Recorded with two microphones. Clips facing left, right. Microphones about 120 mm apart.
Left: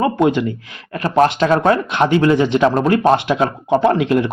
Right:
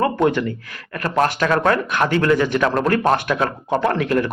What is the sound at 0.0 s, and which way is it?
Speech, 15° left (ahead or behind).